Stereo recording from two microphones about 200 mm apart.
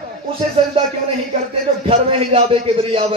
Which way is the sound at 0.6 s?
25° right (ahead or behind).